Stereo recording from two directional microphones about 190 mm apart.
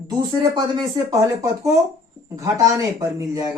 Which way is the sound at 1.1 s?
15° right (ahead or behind).